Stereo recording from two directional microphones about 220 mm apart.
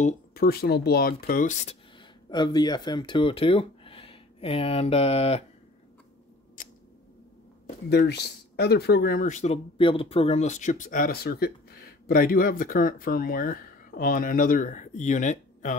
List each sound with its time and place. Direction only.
0.0 s speech: 45° left (ahead or behind)
2.2 s speech: 20° left (ahead or behind)
7.6 s speech: 50° left (ahead or behind)